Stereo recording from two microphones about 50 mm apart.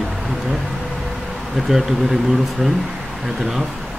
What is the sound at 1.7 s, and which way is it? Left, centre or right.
Speech, centre.